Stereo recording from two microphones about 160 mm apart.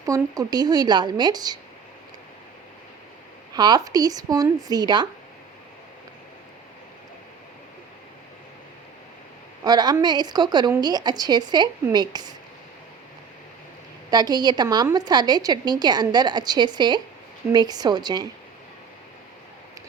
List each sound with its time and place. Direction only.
0.0 s a woman's voice: 20° right (ahead or behind)
3.5 s a woman's voice: 25° right (ahead or behind)
9.6 s a woman's voice: 25° right (ahead or behind)
14.1 s a woman's voice: 25° right (ahead or behind)